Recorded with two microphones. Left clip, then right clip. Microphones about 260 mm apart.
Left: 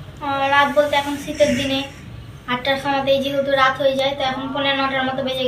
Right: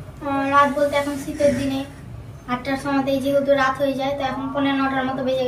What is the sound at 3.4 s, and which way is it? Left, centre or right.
A woman's voice, centre.